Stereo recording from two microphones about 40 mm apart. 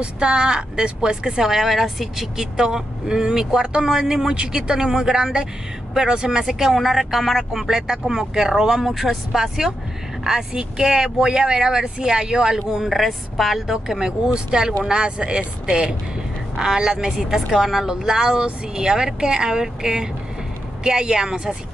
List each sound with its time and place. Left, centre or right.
0.0 s a woman's voice: right; by 2.4 s centre
2.5 s speech: centre
6.7 s speech: centre
12.8 s a woman's voice: centre
13.7 s a woman's voice: centre